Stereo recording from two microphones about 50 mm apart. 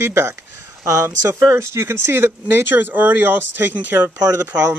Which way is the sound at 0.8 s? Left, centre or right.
Right.